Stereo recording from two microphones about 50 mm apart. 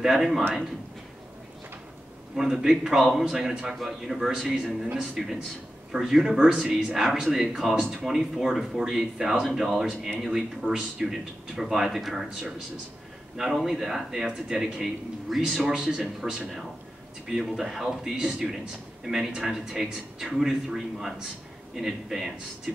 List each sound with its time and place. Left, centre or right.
0.0 s speech: centre
2.3 s speech: centre
13.7 s speech: centre
15.2 s a man's voice: centre
15.5 s speech: centre
18.1 s speech: centre